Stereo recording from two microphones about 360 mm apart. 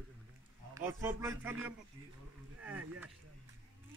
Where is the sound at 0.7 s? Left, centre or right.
Centre.